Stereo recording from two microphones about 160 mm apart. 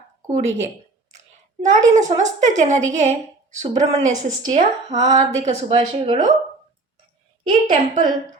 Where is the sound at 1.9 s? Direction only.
50° right (ahead or behind).